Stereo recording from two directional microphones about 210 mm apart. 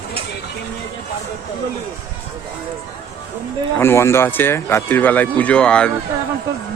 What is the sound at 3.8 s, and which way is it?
A man's voice, 10° left (ahead or behind).